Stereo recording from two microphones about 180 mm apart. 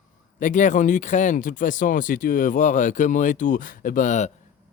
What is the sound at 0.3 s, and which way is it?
Speech, 45° left (ahead or behind).